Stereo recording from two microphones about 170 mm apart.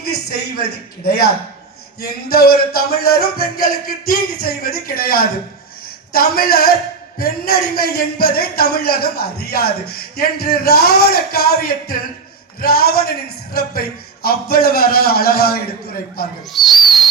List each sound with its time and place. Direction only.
0.0 s a man's voice: 65° left (ahead or behind)
16.5 s speech: centre (ahead or behind)